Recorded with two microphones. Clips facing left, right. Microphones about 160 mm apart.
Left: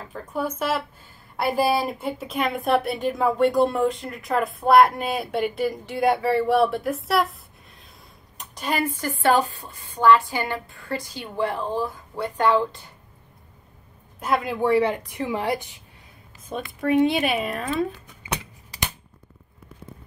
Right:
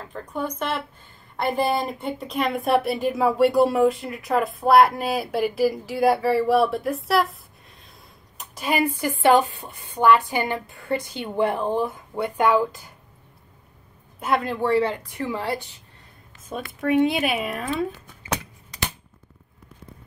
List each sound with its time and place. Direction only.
0.0 s speech: 5° left (ahead or behind)
8.4 s a sound: 5° right (ahead or behind)
8.8 s a woman's voice: 15° right (ahead or behind)
14.2 s a woman's voice: centre (ahead or behind)
16.4 s speech: centre (ahead or behind)